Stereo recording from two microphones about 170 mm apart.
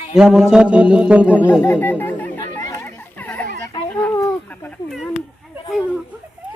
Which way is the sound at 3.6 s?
20° left (ahead or behind).